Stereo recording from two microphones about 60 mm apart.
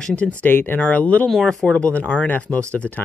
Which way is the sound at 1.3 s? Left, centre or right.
Centre.